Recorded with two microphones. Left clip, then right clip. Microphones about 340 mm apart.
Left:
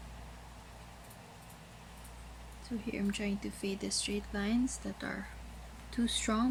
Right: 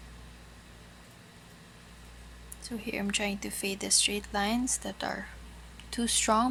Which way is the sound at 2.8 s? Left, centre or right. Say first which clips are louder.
Right 5 dB; right.